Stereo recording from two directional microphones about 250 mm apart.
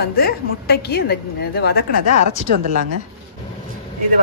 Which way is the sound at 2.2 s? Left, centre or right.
Right.